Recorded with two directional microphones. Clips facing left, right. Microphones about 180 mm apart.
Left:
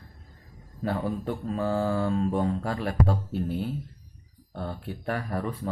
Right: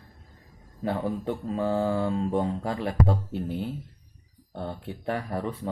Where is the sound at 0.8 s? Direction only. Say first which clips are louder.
Right 1 dB; 20° right (ahead or behind).